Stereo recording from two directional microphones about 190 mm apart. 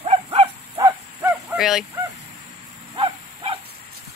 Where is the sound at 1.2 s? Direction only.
15° right (ahead or behind).